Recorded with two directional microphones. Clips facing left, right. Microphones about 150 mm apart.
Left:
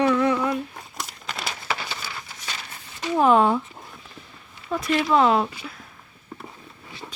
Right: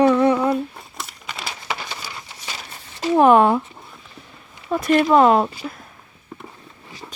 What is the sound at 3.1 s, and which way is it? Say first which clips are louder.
Speech: right 4 dB; 60° right (ahead or behind).